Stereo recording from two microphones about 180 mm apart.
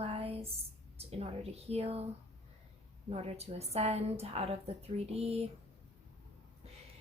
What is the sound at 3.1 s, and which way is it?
Speech, 35° right (ahead or behind).